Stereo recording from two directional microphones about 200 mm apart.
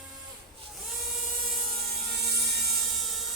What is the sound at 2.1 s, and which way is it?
Helicopter, 55° right (ahead or behind).